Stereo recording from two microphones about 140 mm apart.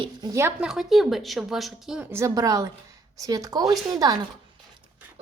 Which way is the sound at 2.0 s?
20° right (ahead or behind).